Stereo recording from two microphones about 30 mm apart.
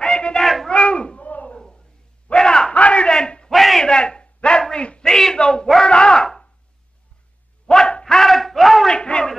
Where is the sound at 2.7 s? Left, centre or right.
Left.